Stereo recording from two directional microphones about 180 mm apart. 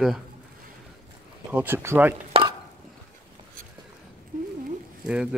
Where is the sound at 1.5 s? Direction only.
10° right (ahead or behind).